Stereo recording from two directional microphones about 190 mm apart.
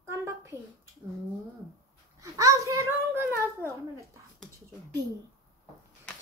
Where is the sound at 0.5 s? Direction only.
10° left (ahead or behind).